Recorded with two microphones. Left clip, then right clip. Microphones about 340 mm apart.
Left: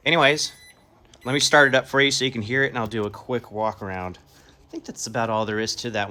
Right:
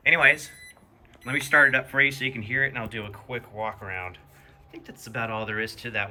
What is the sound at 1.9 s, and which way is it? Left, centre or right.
Speech, right.